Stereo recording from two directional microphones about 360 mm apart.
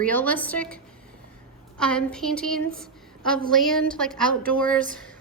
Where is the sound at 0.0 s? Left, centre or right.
Centre.